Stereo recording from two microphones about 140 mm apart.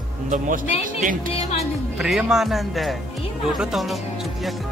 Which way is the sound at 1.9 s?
5° right (ahead or behind).